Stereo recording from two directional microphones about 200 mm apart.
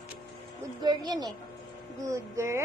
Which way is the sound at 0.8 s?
20° right (ahead or behind).